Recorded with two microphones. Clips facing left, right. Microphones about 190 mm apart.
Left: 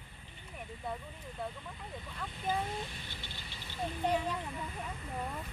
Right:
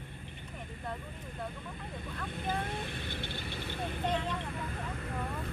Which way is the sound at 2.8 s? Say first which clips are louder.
Right 8 dB; 60° right (ahead or behind).